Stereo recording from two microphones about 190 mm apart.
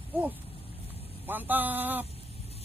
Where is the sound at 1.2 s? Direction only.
10° right (ahead or behind).